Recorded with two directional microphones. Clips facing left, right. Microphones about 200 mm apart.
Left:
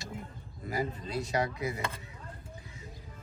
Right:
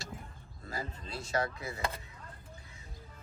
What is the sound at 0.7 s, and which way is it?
Chopping, 20° left (ahead or behind).